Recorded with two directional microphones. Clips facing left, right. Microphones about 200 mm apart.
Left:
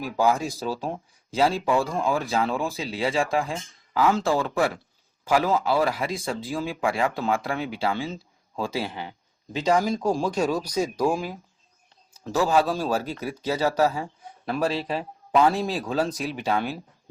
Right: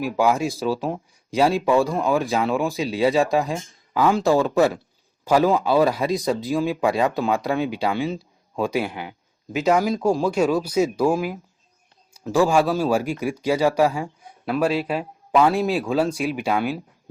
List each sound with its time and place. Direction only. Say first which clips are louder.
0.0 s speech: right 3 dB; 10° right (ahead or behind)
12.1 s speech: right 4 dB; 10° right (ahead or behind)